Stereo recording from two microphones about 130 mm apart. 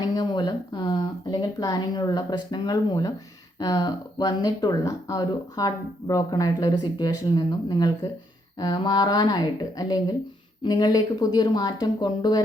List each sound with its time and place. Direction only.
0.0 s speech: 30° left (ahead or behind)